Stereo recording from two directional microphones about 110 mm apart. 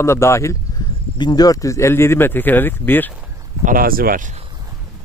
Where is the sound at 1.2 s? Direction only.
40° left (ahead or behind); by 3.1 s 15° left (ahead or behind).